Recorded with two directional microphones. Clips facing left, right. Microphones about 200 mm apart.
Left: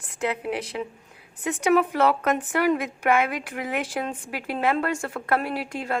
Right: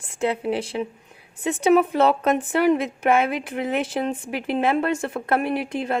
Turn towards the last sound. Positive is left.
turn(degrees=-20)  # may be behind; listen again after turning